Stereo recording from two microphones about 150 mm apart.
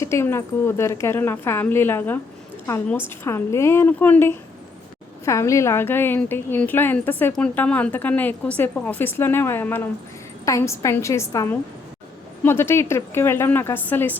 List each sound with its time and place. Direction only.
0.0 s a woman's voice: 15° left (ahead or behind)